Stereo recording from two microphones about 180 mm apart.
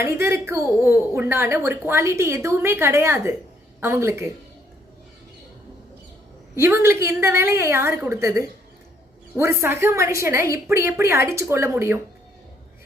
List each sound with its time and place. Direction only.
0.0 s a woman's voice: 15° right (ahead or behind)
6.6 s a woman's voice: 15° right (ahead or behind)